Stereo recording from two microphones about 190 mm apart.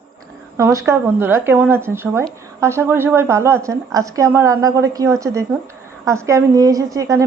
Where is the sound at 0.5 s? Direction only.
15° right (ahead or behind).